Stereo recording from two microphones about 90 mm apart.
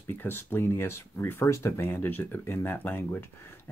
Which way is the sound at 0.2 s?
25° left (ahead or behind).